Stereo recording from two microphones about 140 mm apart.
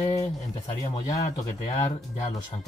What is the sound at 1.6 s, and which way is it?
Speech, 55° left (ahead or behind).